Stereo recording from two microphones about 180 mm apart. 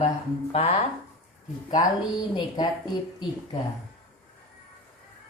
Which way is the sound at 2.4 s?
25° left (ahead or behind).